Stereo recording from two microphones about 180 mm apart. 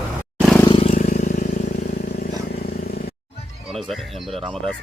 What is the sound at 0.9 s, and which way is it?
Vehicle, 40° left (ahead or behind).